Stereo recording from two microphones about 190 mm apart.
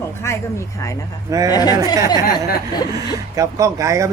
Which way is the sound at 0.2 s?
15° left (ahead or behind).